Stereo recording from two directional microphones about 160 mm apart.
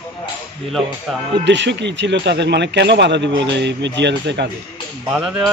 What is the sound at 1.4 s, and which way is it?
A man's voice, 90° right.